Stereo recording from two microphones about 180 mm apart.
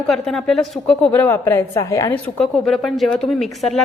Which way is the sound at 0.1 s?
Centre (ahead or behind).